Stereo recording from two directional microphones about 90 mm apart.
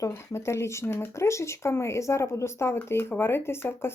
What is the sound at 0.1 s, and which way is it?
Speech, 30° left (ahead or behind).